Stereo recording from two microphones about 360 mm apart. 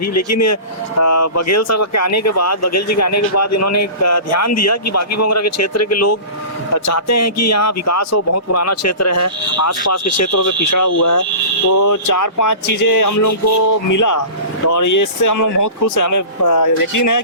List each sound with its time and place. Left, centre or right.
0.0 s speech: left